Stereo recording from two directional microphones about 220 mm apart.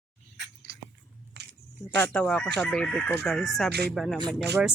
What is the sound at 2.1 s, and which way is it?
Speech, 5° left (ahead or behind).